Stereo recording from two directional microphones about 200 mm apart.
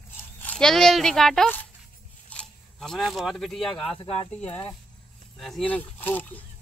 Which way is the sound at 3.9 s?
25° left (ahead or behind).